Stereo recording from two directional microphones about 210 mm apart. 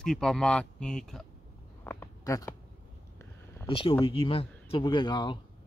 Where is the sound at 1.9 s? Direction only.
15° left (ahead or behind).